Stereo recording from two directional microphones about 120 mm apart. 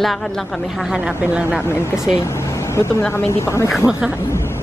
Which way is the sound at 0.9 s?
10° right (ahead or behind).